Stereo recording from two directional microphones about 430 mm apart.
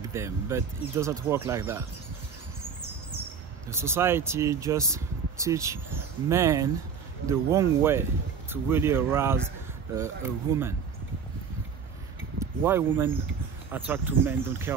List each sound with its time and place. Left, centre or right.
0.0 s speech: centre
3.6 s speech: centre
12.4 s speech: centre